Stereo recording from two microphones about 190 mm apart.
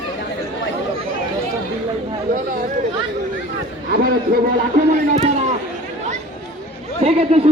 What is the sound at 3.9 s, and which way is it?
A man's voice, 50° right (ahead or behind).